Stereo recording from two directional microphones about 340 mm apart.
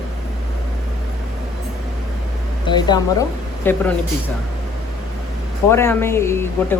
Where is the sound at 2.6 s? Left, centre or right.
Centre.